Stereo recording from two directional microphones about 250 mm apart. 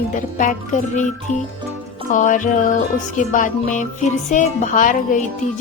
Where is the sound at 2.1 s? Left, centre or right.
Left.